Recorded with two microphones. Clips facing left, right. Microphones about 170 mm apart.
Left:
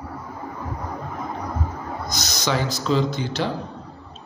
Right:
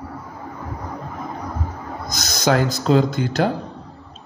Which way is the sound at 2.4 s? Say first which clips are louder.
Right 6 dB; 50° right (ahead or behind).